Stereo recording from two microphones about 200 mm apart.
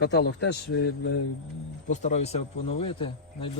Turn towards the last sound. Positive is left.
turn(degrees=25)  # may be behind; listen again after turning